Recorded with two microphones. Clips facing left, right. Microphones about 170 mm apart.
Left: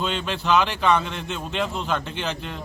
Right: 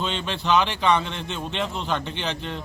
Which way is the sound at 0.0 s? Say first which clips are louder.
Left 1 dB; 5° left (ahead or behind).